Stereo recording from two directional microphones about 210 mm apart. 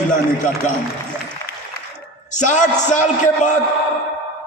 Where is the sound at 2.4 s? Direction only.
35° left (ahead or behind).